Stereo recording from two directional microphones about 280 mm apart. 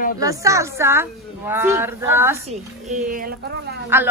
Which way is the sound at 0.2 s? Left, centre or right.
Centre.